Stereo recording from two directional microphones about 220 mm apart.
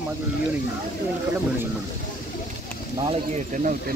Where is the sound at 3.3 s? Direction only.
35° right (ahead or behind).